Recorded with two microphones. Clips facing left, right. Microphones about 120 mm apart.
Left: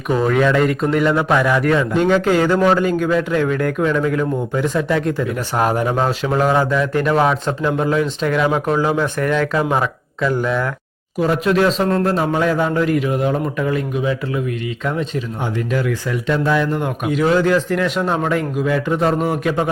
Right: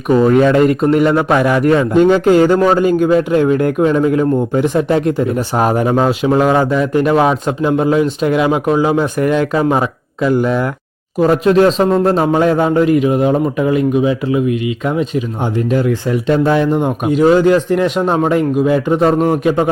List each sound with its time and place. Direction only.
0.3 s speech: 35° right (ahead or behind)
0.8 s a man's voice: 15° right (ahead or behind)
1.6 s a man's voice: 25° right (ahead or behind)
2.0 s speech: 40° right (ahead or behind)
2.8 s a man's voice: 25° right (ahead or behind)
5.2 s speech: 35° right (ahead or behind)
5.6 s a man's voice: 20° right (ahead or behind)
11.2 s a man's voice: 35° right (ahead or behind); by 15.2 s 15° right (ahead or behind)
15.7 s a man's voice: 30° right (ahead or behind)